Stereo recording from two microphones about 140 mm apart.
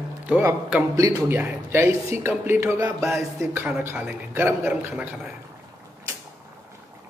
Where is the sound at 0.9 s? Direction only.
25° right (ahead or behind).